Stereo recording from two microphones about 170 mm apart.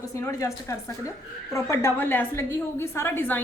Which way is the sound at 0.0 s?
20° left (ahead or behind).